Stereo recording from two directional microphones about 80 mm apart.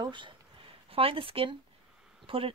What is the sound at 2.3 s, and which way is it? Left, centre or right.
Speech, right.